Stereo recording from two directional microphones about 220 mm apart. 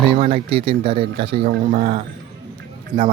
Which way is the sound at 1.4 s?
40° right (ahead or behind).